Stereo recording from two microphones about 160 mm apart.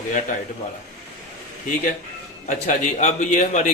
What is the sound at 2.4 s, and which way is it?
A man's voice, 45° left (ahead or behind).